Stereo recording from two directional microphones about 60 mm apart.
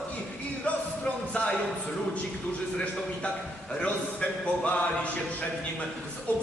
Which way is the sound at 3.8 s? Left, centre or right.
Left.